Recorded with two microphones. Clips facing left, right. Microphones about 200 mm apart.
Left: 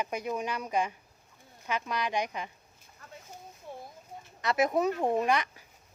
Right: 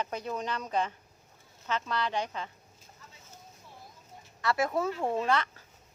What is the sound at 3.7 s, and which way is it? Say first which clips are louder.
Bird: left 12 dB; 55° left (ahead or behind).